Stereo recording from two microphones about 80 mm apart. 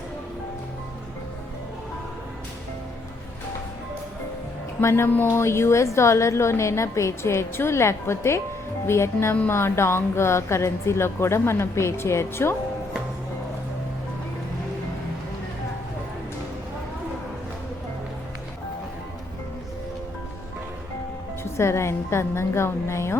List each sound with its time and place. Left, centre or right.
4.8 s a woman's voice: left
21.6 s a woman's voice: left